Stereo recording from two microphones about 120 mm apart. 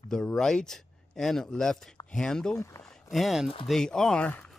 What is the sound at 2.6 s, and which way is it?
Speech, 25° left (ahead or behind).